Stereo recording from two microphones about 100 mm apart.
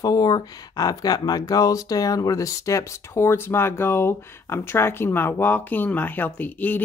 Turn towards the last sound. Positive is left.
turn(degrees=15)  # may be behind; listen again after turning